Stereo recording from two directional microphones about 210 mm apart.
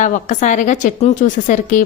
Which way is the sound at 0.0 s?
35° left (ahead or behind).